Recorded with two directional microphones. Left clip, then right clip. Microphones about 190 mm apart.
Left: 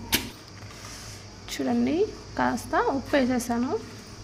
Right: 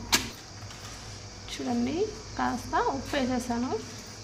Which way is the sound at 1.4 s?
25° left (ahead or behind).